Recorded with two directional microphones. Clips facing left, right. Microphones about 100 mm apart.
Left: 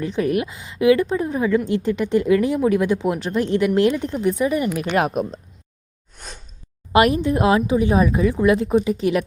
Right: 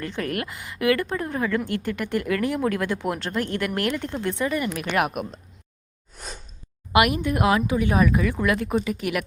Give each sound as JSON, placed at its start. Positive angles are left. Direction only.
{"t": 0.0, "sound": "speech", "side_deg": 20}
{"t": 6.1, "sound": "a sound", "side_deg": 0}
{"t": 6.9, "sound": "speech", "side_deg": 30}